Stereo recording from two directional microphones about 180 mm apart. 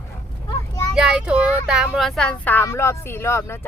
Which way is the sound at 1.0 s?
5° right (ahead or behind).